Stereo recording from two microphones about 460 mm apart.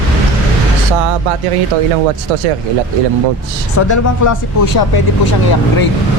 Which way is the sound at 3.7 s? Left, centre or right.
Left.